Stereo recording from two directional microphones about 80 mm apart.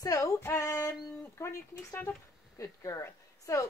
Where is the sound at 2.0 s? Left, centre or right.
Left.